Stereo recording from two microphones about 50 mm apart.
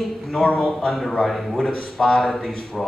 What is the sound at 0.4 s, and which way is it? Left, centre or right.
Speech, centre.